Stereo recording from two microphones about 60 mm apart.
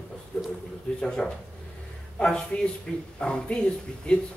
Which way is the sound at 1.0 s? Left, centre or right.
Centre.